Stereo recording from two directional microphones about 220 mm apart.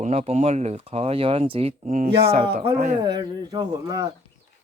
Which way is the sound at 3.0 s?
20° right (ahead or behind).